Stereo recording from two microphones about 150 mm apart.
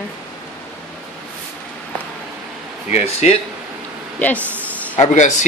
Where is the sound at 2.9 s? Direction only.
45° left (ahead or behind).